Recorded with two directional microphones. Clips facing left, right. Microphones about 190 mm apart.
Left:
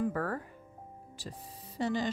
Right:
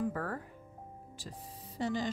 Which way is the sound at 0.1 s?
75° left (ahead or behind).